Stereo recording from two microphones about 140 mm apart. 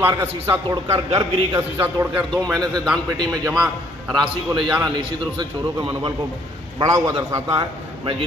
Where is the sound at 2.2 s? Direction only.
Centre (ahead or behind).